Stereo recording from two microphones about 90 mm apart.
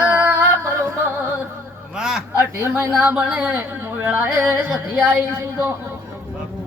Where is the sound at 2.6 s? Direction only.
25° right (ahead or behind).